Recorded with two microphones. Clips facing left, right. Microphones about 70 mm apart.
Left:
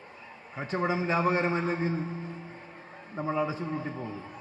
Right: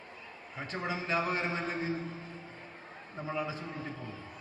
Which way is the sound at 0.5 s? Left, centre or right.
Left.